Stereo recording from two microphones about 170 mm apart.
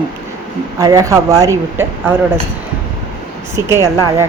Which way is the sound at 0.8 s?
20° right (ahead or behind).